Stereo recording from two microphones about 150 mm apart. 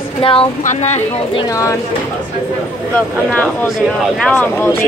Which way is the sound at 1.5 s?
20° left (ahead or behind).